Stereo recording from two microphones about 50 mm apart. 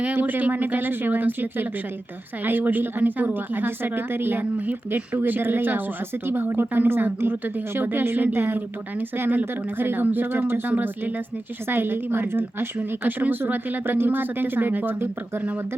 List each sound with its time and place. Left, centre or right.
0.0 s speech: right
4.5 s a woman's voice: right